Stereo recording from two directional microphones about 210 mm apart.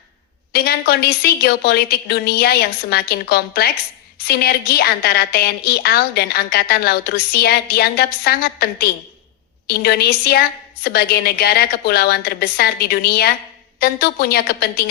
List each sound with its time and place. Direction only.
0.5 s a woman's voice: 45° left (ahead or behind)